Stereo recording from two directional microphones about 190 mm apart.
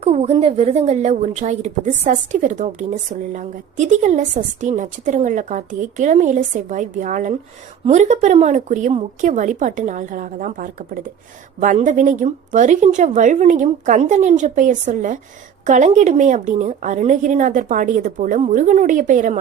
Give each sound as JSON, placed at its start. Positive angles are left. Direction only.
{"t": 0.0, "sound": "a woman's voice", "side_deg": -35}